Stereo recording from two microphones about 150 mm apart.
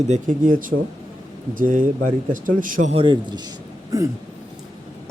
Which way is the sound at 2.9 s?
30° right (ahead or behind).